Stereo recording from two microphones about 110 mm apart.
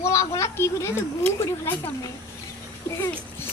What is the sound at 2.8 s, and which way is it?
Speech, 25° left (ahead or behind).